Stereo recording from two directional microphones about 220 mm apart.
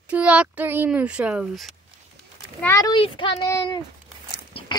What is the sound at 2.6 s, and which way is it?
A child's voice, 15° left (ahead or behind).